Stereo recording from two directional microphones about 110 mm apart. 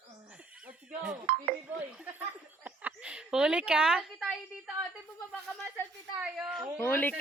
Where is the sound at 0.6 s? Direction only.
10° right (ahead or behind).